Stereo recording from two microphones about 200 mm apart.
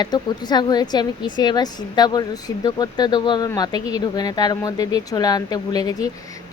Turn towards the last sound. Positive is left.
turn(degrees=20)  # may be behind; listen again after turning